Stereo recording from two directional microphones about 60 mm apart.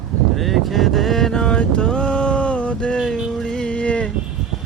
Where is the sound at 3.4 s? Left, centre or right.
Centre.